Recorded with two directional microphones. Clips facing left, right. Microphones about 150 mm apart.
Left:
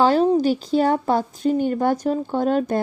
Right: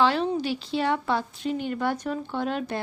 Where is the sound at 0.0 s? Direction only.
40° left (ahead or behind).